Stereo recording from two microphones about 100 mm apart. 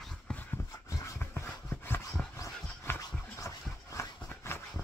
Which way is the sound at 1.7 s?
25° left (ahead or behind).